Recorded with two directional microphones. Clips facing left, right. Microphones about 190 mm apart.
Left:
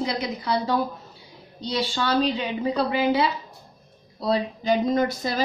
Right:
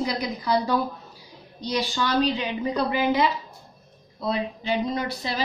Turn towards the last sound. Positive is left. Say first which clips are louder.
# left 5 dB
turn(degrees=45)  # may be behind; listen again after turning